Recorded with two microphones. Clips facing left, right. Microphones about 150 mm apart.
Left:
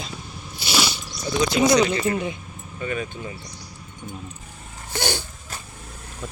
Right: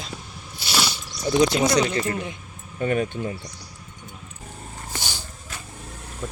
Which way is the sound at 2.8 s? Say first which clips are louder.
Right 5 dB; 50° right (ahead or behind).